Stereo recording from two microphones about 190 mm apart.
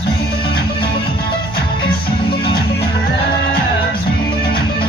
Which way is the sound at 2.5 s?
55° left (ahead or behind).